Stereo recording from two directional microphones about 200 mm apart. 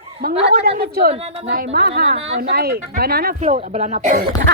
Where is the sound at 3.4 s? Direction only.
35° right (ahead or behind).